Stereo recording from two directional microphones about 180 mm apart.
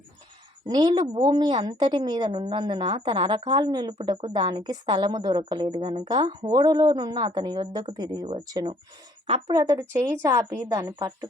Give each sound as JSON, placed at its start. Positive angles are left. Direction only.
{"t": 0.7, "sound": "a woman's voice", "side_deg": -25}